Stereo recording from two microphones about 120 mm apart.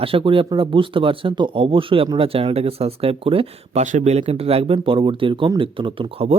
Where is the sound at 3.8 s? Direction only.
85° right.